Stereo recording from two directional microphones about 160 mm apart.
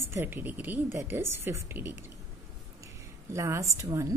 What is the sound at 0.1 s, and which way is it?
A woman's voice, 15° right (ahead or behind).